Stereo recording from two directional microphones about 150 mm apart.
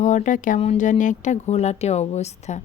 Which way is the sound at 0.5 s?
50° left (ahead or behind).